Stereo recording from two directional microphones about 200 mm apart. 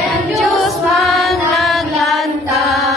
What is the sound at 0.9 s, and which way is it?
Music, centre (ahead or behind).